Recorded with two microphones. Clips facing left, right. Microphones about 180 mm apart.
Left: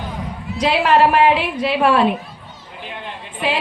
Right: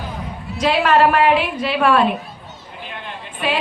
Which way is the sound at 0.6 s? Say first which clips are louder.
Even; 20° left (ahead or behind).